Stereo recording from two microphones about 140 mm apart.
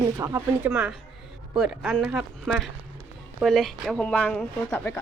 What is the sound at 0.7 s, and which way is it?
Speech, 5° right (ahead or behind).